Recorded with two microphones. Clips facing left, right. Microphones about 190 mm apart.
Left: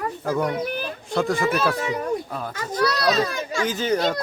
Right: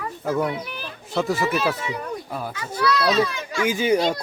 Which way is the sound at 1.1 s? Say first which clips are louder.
Left 1 dB; 5° right (ahead or behind).